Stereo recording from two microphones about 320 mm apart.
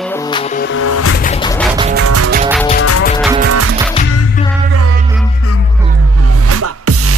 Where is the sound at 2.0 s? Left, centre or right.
Right.